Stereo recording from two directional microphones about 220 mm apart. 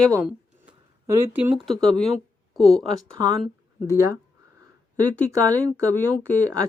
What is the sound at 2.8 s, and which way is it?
Speech, 20° right (ahead or behind).